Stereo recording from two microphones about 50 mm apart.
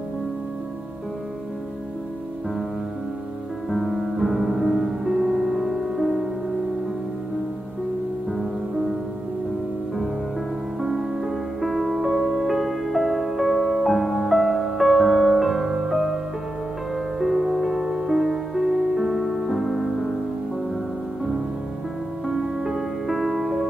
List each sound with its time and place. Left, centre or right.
3.7 s music: centre
10.8 s music: centre
17.2 s music: centre
22.3 s music: centre